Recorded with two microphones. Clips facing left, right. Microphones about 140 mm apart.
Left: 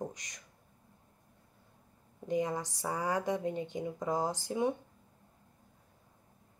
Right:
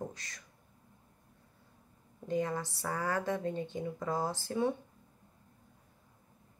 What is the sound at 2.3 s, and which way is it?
Speech, 15° left (ahead or behind).